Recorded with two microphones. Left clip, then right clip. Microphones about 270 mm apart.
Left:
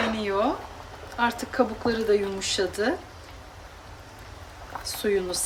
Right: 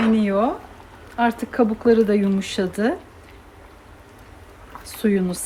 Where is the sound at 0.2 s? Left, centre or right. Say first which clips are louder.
Right 4 dB; centre.